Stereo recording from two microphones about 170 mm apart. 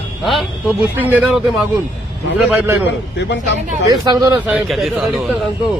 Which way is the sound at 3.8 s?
20° right (ahead or behind).